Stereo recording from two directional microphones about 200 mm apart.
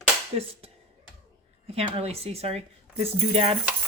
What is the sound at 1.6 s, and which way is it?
Speech, 30° right (ahead or behind).